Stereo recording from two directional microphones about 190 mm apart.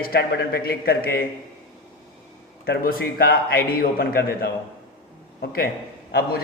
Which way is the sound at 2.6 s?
50° left (ahead or behind).